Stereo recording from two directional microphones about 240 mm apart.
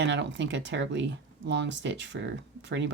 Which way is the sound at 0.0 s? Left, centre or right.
Right.